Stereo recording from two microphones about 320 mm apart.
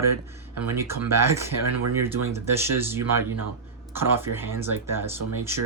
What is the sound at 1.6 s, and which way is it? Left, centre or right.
Speech, right.